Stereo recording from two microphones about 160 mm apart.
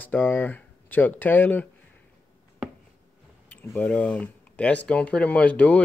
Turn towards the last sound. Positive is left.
turn(degrees=10)  # may be behind; listen again after turning